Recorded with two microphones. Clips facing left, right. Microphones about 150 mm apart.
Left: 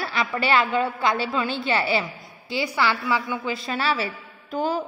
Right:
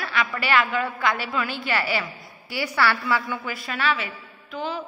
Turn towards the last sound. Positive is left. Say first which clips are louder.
# left 5 dB
turn(degrees=40)  # may be behind; listen again after turning